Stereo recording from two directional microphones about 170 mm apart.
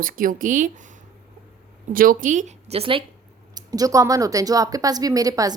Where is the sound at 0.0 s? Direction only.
55° right (ahead or behind).